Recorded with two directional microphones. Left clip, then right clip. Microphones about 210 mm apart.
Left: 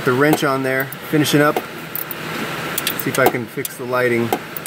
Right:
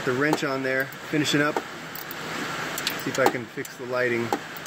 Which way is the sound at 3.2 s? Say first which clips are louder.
Left 7 dB; 10° left (ahead or behind).